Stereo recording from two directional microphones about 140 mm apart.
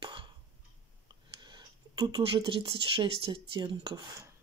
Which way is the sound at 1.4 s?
30° right (ahead or behind).